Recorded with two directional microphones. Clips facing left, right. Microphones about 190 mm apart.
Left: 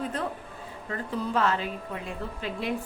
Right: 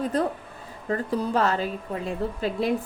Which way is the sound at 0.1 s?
40° right (ahead or behind).